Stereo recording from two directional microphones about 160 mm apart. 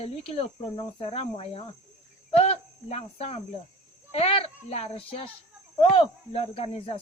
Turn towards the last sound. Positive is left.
turn(degrees=35)  # may be behind; listen again after turning